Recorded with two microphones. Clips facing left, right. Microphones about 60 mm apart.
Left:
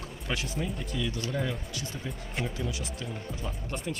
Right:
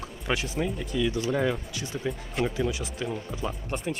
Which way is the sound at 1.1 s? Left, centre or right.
Centre.